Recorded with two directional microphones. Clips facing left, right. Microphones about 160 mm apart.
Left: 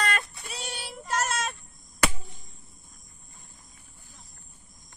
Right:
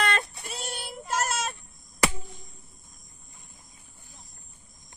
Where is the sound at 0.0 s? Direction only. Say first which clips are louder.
Right 2 dB; 25° right (ahead or behind).